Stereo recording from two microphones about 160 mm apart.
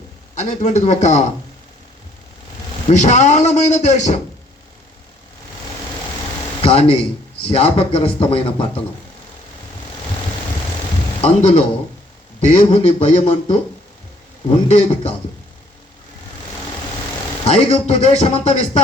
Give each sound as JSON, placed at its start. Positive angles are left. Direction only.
{"t": 0.3, "sound": "a man's voice", "side_deg": 50}
{"t": 2.9, "sound": "a man's voice", "side_deg": 50}
{"t": 6.6, "sound": "a man's voice", "side_deg": 35}
{"t": 11.2, "sound": "a man's voice", "side_deg": 40}
{"t": 14.7, "sound": "a man's voice", "side_deg": 45}
{"t": 17.4, "sound": "a man's voice", "side_deg": 40}